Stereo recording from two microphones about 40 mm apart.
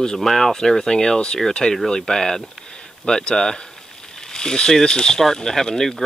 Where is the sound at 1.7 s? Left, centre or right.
Centre.